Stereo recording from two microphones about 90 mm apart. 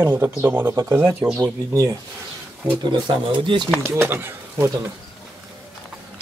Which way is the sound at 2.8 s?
60° right (ahead or behind).